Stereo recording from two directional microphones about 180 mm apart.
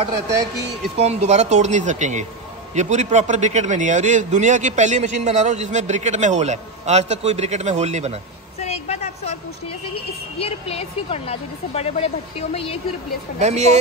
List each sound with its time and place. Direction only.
0.9 s a man's voice: 35° right (ahead or behind)
8.5 s vehicle: 35° left (ahead or behind)
10.4 s a woman's voice: 35° left (ahead or behind)
13.4 s a man's voice: 40° right (ahead or behind)